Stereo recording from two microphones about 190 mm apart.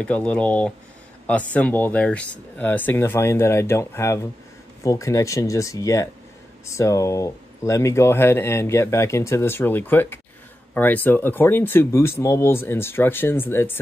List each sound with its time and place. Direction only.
0.0 s speech: 5° left (ahead or behind)